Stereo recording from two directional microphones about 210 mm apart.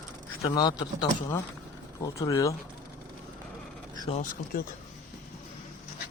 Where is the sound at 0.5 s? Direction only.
20° left (ahead or behind).